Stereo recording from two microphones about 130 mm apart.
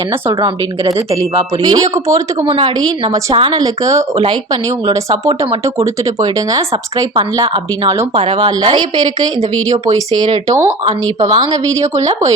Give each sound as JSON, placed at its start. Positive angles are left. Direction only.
{"t": 0.4, "sound": "speech", "side_deg": -25}
{"t": 2.4, "sound": "a woman's voice", "side_deg": -40}
{"t": 3.6, "sound": "speech", "side_deg": -25}
{"t": 8.1, "sound": "speech", "side_deg": -50}
{"t": 8.4, "sound": "a woman's voice", "side_deg": -35}